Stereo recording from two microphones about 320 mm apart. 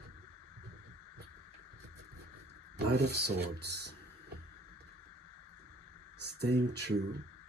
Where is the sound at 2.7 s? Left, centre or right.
Right.